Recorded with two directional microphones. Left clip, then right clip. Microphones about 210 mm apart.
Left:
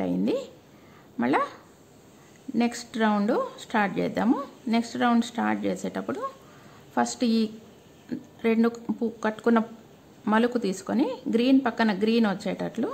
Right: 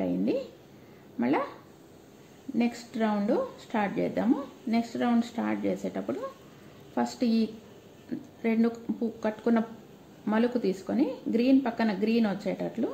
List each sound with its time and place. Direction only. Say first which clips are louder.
0.0 s a sound: left 2 dB; 25° left (ahead or behind)
1.1 s speech: left 4 dB; 25° left (ahead or behind)
2.5 s speech: left 3 dB; 25° left (ahead or behind)